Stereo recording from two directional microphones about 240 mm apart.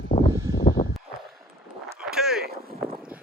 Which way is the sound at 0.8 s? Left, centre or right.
Left.